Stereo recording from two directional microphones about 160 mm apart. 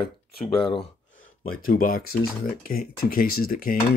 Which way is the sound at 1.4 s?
60° left (ahead or behind).